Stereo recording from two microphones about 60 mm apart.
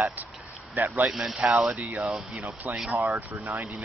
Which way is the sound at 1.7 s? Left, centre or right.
Right.